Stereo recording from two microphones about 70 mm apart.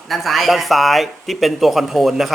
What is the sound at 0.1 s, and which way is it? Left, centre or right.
Speech, centre.